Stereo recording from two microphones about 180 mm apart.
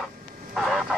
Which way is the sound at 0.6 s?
Centre (ahead or behind).